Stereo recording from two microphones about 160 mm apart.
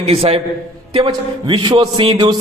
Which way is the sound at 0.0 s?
40° right (ahead or behind).